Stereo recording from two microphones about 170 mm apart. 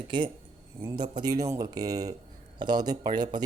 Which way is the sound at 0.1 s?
25° right (ahead or behind).